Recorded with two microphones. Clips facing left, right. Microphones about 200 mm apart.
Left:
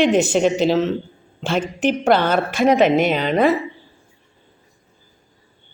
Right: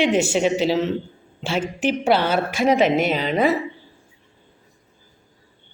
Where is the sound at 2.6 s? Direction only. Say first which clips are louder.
Left 3 dB; 50° left (ahead or behind).